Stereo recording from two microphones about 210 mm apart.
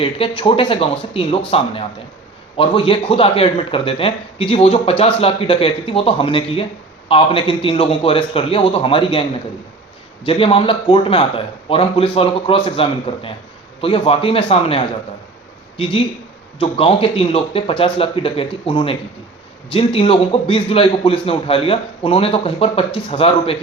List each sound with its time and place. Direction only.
0.0 s a man's voice: 25° left (ahead or behind)
10.2 s a man's voice: 25° left (ahead or behind)